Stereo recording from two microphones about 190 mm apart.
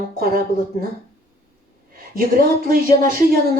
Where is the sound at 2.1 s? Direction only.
50° right (ahead or behind).